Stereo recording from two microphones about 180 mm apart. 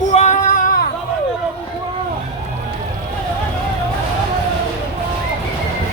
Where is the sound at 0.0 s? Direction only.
40° left (ahead or behind).